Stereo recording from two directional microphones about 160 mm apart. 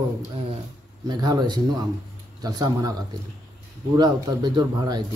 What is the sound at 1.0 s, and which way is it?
Speech, 25° right (ahead or behind).